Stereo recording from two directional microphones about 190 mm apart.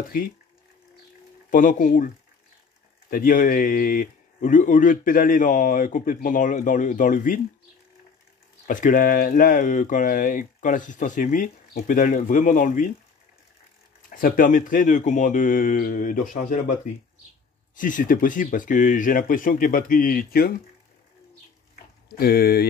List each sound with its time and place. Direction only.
1.5 s speech: 45° left (ahead or behind)
8.6 s speech: 45° left (ahead or behind)
14.1 s speech: 45° left (ahead or behind)
17.7 s speech: 45° left (ahead or behind)
22.1 s speech: 50° left (ahead or behind)